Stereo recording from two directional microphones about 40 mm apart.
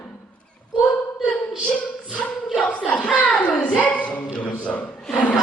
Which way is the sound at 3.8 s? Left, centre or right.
Left.